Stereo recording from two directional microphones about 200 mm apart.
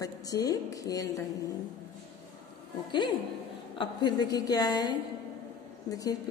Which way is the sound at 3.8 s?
20° left (ahead or behind).